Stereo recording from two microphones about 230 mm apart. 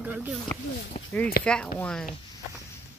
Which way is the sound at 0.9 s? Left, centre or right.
Left.